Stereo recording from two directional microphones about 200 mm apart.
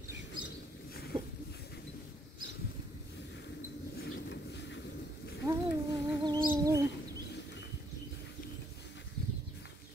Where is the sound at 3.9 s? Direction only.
50° left (ahead or behind).